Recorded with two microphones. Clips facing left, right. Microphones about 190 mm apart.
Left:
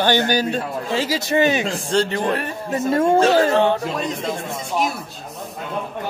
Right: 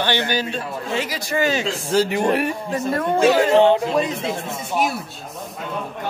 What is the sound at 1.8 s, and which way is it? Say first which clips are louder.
Speech: right 3 dB; 10° right (ahead or behind).